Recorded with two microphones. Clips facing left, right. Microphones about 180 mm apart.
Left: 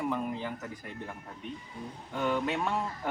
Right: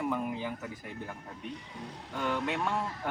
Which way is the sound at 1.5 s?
75° right (ahead or behind).